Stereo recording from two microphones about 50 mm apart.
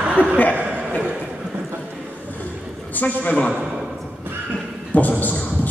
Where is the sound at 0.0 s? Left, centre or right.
Right.